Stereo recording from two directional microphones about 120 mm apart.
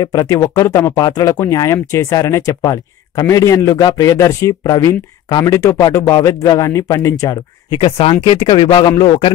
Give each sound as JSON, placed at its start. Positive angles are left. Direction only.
{"t": 0.0, "sound": "speech", "side_deg": 25}
{"t": 7.7, "sound": "speech", "side_deg": 50}